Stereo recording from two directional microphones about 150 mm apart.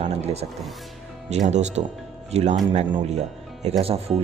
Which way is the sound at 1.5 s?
50° right (ahead or behind).